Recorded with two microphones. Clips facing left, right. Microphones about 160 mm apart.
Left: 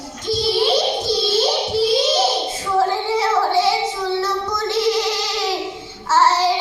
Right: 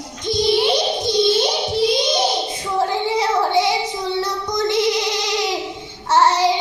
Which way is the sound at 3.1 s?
15° right (ahead or behind).